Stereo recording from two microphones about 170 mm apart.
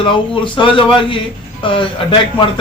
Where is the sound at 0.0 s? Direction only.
30° left (ahead or behind).